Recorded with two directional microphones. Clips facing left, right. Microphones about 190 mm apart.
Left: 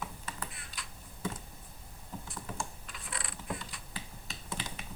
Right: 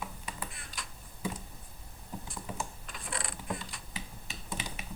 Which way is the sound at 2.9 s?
45° right (ahead or behind).